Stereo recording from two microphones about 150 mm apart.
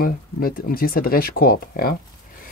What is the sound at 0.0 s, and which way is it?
Speech, 75° left (ahead or behind).